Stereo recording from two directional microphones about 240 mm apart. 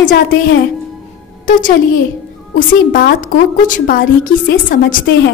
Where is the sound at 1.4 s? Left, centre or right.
Left.